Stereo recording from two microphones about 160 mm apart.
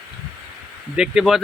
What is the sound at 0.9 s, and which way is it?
Speech, 5° right (ahead or behind).